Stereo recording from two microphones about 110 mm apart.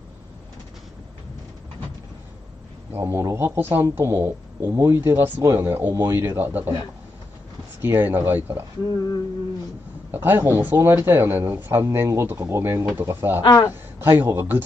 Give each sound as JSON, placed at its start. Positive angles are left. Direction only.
{"t": 2.9, "sound": "a man's voice", "side_deg": -25}
{"t": 7.8, "sound": "a man's voice", "side_deg": -20}
{"t": 10.1, "sound": "a man's voice", "side_deg": -20}
{"t": 13.4, "sound": "speech", "side_deg": 40}
{"t": 13.7, "sound": "a man's voice", "side_deg": -20}